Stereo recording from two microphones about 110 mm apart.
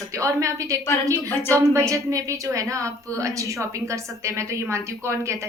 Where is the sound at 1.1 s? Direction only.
20° left (ahead or behind).